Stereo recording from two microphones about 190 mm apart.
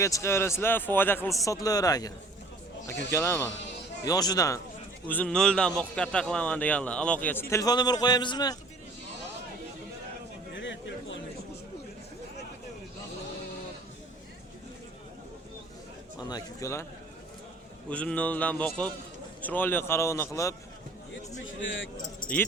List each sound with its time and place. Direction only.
0.0 s speech: 15° left (ahead or behind)
3.6 s bleat: 65° left (ahead or behind)
4.0 s a man's voice: 20° left (ahead or behind)
5.0 s a man's voice: 5° left (ahead or behind)
7.5 s a man's voice: 20° left (ahead or behind)
10.5 s a sound: 70° left (ahead or behind)
16.1 s speech: 20° left (ahead or behind)
17.8 s speech: 5° left (ahead or behind)
21.4 s speech: 85° left